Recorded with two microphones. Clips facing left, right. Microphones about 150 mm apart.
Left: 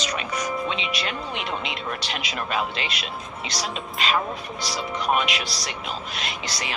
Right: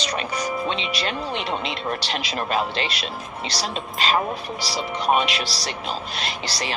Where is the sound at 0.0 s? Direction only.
35° right (ahead or behind).